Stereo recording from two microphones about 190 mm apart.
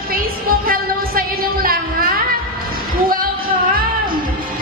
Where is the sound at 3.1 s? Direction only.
50° right (ahead or behind).